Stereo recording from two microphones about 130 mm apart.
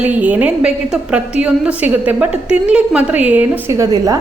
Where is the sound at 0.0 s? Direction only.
10° right (ahead or behind).